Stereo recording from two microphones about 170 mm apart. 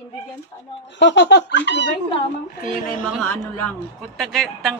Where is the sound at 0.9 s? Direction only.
90° left.